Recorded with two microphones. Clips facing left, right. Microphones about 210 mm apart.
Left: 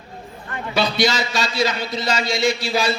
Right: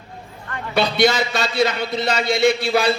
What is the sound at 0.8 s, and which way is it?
A man's voice, 60° right (ahead or behind).